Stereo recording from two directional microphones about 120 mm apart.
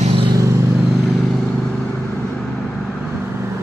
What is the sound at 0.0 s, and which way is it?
Vehicle, 55° right (ahead or behind).